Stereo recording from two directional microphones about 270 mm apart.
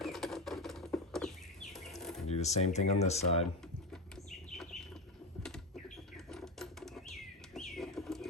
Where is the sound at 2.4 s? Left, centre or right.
Left.